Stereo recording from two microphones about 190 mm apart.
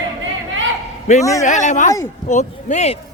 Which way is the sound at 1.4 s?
40° left (ahead or behind).